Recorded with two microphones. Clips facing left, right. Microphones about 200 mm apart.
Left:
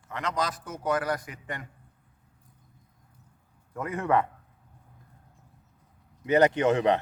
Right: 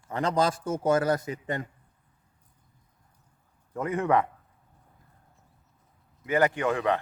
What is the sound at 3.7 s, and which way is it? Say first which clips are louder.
Speech: right 1 dB; 20° right (ahead or behind).